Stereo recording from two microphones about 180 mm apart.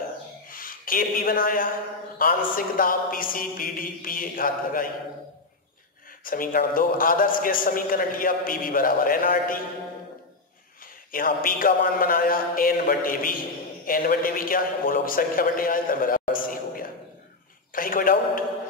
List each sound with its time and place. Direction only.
0.5 s a man's voice: 50° left (ahead or behind)
6.2 s a man's voice: 50° left (ahead or behind)
11.1 s a man's voice: 50° left (ahead or behind)